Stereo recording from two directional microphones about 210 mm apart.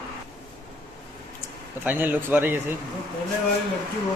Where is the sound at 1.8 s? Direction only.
10° right (ahead or behind).